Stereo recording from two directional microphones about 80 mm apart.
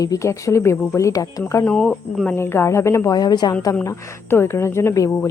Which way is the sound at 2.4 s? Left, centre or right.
Left.